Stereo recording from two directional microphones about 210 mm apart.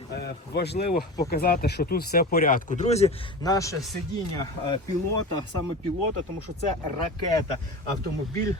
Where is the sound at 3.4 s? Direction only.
15° left (ahead or behind).